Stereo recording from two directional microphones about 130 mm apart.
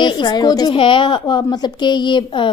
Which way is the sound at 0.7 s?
45° left (ahead or behind).